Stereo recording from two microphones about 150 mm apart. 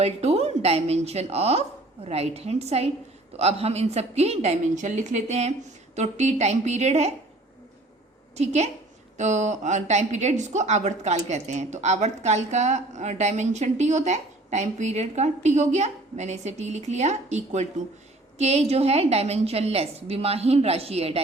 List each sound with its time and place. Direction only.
0.0 s a woman's voice: 45° right (ahead or behind)
8.4 s a woman's voice: 50° right (ahead or behind)